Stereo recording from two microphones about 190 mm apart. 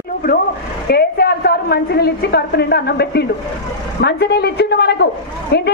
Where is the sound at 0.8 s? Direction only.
55° left (ahead or behind).